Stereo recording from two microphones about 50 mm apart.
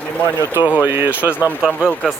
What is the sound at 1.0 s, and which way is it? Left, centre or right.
Speech, right.